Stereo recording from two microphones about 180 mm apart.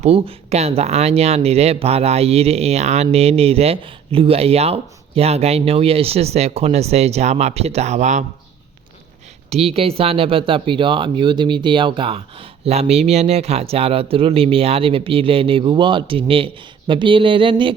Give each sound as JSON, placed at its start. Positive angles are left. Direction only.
{"t": 0.0, "sound": "speech", "side_deg": -35}
{"t": 9.5, "sound": "speech", "side_deg": -35}